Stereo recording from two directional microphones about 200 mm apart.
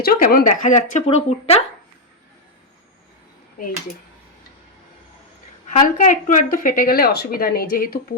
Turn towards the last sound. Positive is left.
turn(degrees=45)  # may be behind; listen again after turning